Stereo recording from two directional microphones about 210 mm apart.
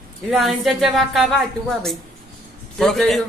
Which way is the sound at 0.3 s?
Centre (ahead or behind).